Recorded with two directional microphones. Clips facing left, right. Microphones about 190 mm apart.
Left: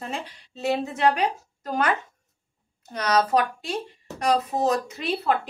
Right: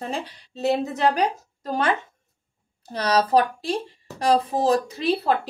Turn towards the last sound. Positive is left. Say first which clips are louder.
# right 3 dB
turn(degrees=-35)  # may be behind; listen again after turning